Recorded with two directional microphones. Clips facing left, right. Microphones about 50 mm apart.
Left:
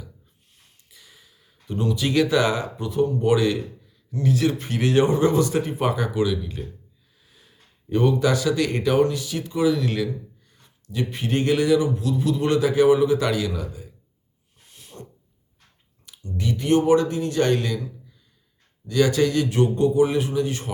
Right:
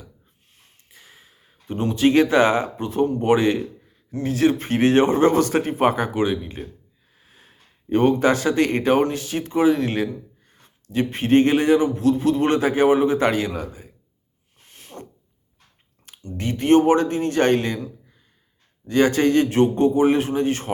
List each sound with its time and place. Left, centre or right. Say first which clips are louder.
0.5 s speech: right 3 dB; right
14.7 s a sound: right 3 dB; right
16.0 s speech: even; right